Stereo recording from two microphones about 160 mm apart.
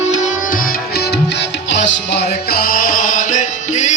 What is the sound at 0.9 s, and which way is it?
Music, 90° left.